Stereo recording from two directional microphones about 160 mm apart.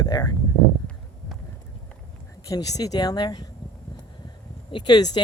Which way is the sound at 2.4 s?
20° left (ahead or behind).